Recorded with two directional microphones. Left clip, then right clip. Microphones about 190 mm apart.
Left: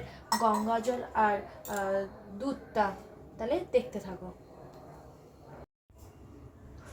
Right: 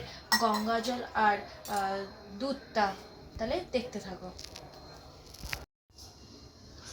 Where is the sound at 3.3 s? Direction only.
50° left (ahead or behind).